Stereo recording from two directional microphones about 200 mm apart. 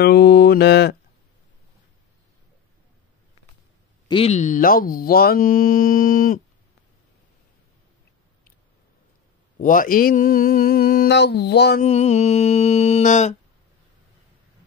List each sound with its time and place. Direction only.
0.0 s mantra: 55° left (ahead or behind)
4.1 s speech: 30° left (ahead or behind)
9.6 s speech: 45° left (ahead or behind)
11.8 s music: 35° left (ahead or behind)